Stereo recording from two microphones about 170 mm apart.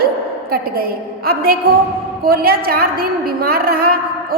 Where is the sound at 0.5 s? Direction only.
60° right (ahead or behind).